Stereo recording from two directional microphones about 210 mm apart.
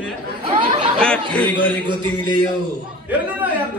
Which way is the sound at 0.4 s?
25° right (ahead or behind).